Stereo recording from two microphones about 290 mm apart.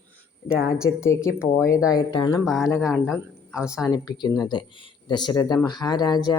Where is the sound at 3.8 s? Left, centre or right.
Centre.